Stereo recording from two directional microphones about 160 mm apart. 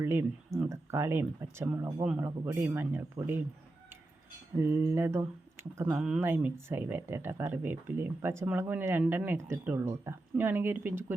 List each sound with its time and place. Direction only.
0.0 s speech: 15° right (ahead or behind)
4.6 s speech: 15° right (ahead or behind)